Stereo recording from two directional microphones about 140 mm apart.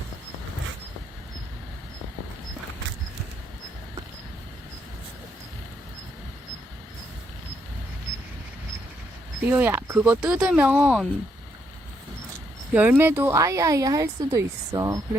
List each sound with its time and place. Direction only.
9.5 s speech: 15° right (ahead or behind)
12.7 s speech: 10° right (ahead or behind)